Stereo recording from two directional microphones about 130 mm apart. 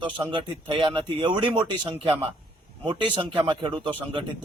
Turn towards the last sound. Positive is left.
turn(degrees=-40)  # may be behind; listen again after turning